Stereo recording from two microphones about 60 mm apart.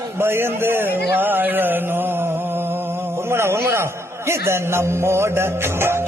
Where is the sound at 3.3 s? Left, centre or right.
Right.